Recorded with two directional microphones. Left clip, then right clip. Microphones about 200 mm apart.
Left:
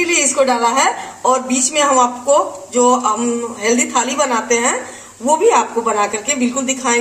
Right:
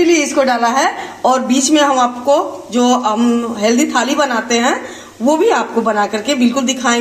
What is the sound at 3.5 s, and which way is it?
A woman's voice, 40° right (ahead or behind).